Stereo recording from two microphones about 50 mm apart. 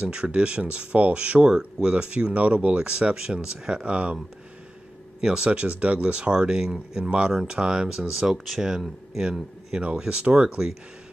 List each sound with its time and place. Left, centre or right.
0.0 s speech: right
5.2 s speech: centre
6.3 s speech: centre